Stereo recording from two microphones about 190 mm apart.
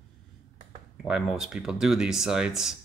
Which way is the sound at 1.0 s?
5° right (ahead or behind).